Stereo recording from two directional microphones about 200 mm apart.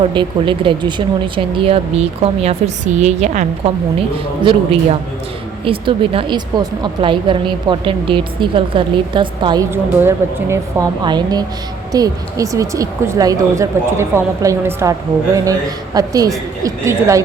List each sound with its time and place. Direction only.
0.0 s a woman's voice: 25° right (ahead or behind)
4.4 s a woman's voice: 30° right (ahead or behind)
16.0 s a woman's voice: 15° right (ahead or behind)